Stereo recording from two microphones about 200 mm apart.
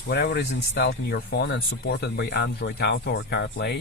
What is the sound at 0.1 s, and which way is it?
Speech, 55° left (ahead or behind).